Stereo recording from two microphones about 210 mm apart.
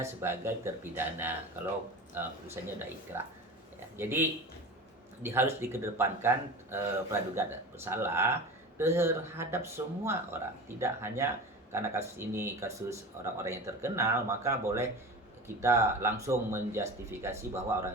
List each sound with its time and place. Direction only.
0.0 s speech: 10° right (ahead or behind)